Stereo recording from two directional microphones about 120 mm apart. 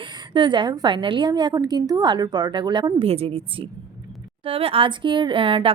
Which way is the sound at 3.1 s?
55° right (ahead or behind).